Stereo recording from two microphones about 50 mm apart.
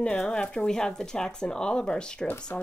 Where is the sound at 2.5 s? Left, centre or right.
Left.